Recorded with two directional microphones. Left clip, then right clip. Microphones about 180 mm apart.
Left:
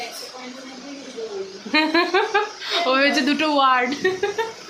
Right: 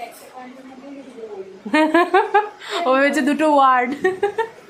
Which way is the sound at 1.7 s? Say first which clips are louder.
Right 3 dB; 30° right (ahead or behind).